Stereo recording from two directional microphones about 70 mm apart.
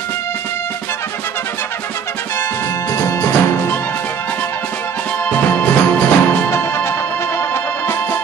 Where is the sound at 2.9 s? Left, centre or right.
Left.